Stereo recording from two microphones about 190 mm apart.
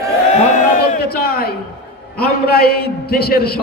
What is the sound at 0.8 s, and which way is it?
A man's voice, 55° left (ahead or behind).